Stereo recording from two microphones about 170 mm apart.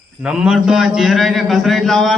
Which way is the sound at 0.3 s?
5° right (ahead or behind).